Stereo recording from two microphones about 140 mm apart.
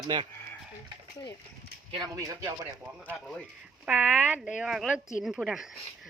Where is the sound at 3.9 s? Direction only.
10° right (ahead or behind).